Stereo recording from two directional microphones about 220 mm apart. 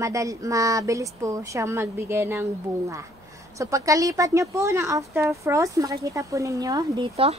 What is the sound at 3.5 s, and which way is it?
Speech, 15° right (ahead or behind).